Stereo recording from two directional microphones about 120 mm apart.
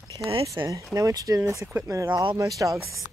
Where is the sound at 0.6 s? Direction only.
35° right (ahead or behind).